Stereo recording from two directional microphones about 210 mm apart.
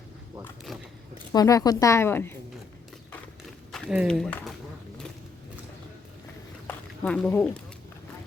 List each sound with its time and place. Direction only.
0.7 s speech: centre (ahead or behind)
1.3 s speech: 15° left (ahead or behind)
3.7 s speech: centre (ahead or behind)
6.7 s a sound: 5° left (ahead or behind)